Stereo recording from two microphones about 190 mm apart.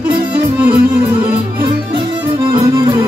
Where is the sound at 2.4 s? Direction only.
25° right (ahead or behind).